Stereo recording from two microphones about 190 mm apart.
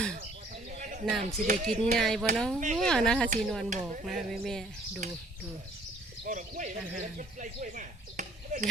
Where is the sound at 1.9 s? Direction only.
Centre (ahead or behind).